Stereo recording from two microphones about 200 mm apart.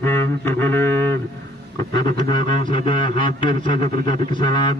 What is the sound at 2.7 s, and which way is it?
A man's voice, 25° left (ahead or behind).